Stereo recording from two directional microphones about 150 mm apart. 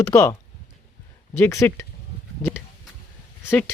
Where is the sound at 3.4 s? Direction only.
15° left (ahead or behind).